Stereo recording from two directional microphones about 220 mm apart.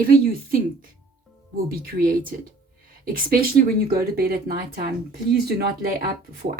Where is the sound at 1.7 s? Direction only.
40° right (ahead or behind).